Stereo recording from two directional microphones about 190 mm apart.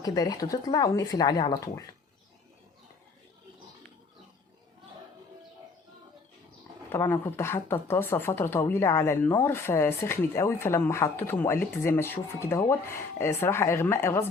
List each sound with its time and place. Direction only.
0.0 s speech: 20° left (ahead or behind)
6.9 s speech: 10° left (ahead or behind)